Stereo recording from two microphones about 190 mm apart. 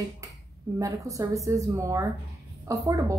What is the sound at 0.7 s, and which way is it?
A woman's voice, 15° right (ahead or behind).